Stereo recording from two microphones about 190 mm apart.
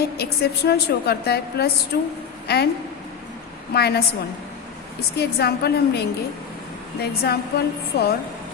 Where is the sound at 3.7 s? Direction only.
55° left (ahead or behind).